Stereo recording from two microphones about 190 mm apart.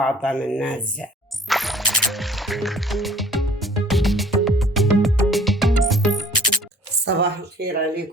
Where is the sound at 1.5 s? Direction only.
Centre (ahead or behind).